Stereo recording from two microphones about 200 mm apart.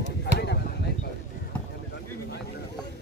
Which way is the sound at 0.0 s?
60° left (ahead or behind).